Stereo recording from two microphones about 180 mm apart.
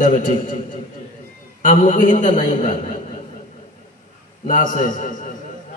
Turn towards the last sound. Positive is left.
turn(degrees=45)  # may be behind; listen again after turning